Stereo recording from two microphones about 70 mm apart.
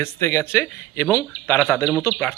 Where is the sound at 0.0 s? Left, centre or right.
Left.